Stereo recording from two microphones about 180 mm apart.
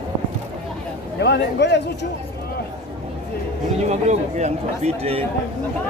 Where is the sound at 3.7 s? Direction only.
40° right (ahead or behind).